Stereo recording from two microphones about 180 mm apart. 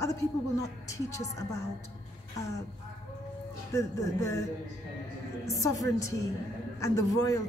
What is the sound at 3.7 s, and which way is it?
Speech, 15° left (ahead or behind).